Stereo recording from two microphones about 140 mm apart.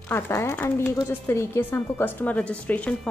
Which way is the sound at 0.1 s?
15° left (ahead or behind).